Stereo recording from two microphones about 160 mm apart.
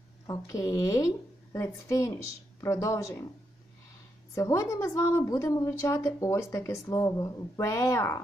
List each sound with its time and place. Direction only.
0.3 s a woman's voice: 20° left (ahead or behind)
4.4 s a woman's voice: 20° left (ahead or behind)